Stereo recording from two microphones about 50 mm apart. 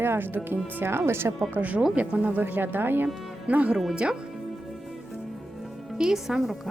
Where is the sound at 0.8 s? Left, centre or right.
Right.